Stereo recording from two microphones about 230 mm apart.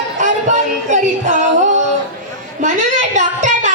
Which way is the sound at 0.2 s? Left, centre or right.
Right.